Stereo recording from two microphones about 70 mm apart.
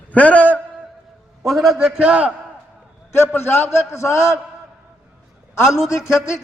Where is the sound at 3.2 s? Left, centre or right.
Left.